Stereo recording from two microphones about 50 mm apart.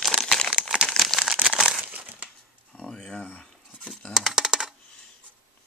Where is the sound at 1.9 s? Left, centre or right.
Right.